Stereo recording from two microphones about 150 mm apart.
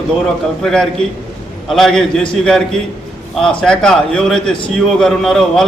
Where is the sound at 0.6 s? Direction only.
5° left (ahead or behind).